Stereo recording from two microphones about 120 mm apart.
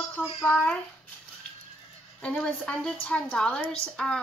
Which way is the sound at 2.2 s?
10° left (ahead or behind).